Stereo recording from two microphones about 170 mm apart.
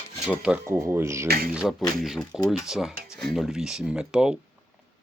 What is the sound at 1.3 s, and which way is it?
Speech, 60° right (ahead or behind).